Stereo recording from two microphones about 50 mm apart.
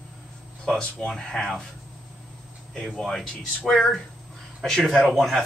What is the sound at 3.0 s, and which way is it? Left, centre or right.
Speech, centre.